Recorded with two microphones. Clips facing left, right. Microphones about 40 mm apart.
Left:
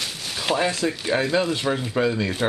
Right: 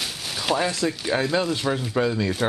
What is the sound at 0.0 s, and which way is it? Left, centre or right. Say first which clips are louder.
Speech: even; centre.